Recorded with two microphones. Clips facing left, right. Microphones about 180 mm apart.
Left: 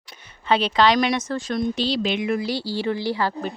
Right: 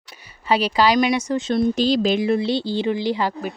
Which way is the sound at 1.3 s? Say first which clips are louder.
Right 5 dB; 25° right (ahead or behind).